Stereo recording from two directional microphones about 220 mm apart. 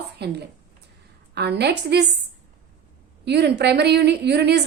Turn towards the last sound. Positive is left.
turn(degrees=-50)  # may be behind; listen again after turning